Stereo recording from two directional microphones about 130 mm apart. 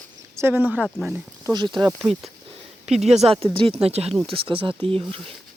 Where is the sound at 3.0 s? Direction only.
55° right (ahead or behind).